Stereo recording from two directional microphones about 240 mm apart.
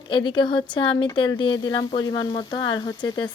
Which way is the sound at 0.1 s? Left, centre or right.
Centre.